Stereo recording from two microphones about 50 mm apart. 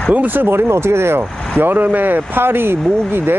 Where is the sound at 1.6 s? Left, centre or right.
Right.